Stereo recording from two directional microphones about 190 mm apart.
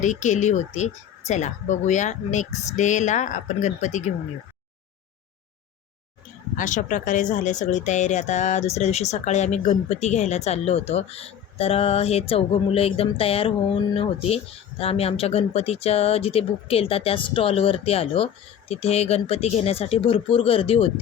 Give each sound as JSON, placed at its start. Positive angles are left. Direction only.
{"t": 0.0, "sound": "speech", "side_deg": 40}
{"t": 6.6, "sound": "speech", "side_deg": 40}